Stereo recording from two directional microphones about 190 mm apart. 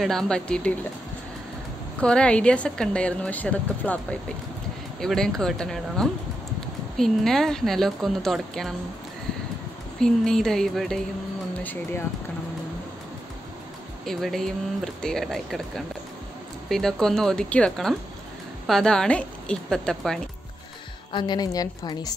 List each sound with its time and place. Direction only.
0.0 s a woman's voice: centre (ahead or behind)
2.0 s a woman's voice: 5° left (ahead or behind)
9.9 s a woman's voice: 5° left (ahead or behind)
14.0 s a woman's voice: centre (ahead or behind)
21.1 s a woman's voice: 25° left (ahead or behind)